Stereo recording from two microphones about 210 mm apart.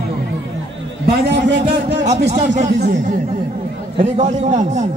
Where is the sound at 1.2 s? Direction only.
55° right (ahead or behind).